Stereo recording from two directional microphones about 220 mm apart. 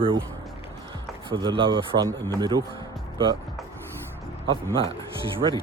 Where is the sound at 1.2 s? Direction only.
20° right (ahead or behind).